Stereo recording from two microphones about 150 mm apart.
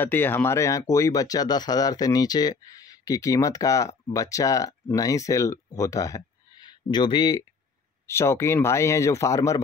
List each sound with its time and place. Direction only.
0.0 s speech: 15° left (ahead or behind); by 7.4 s 30° left (ahead or behind)
8.1 s speech: 15° left (ahead or behind)